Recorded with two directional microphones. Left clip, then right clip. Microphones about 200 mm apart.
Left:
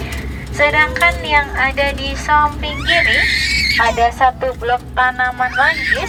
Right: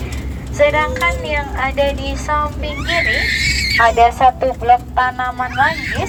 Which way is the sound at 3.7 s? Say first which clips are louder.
Right 6 dB; 40° right (ahead or behind).